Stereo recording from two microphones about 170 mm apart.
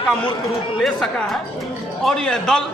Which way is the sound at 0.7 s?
Centre (ahead or behind).